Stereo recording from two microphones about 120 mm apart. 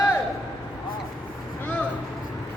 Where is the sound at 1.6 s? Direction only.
10° left (ahead or behind).